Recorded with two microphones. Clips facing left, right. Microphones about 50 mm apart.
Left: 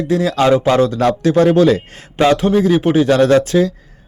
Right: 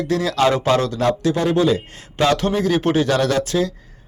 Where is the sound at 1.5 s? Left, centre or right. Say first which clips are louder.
Left 5 dB; left.